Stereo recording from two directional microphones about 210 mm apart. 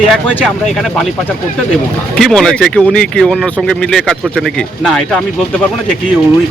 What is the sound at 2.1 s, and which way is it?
Speech, centre (ahead or behind).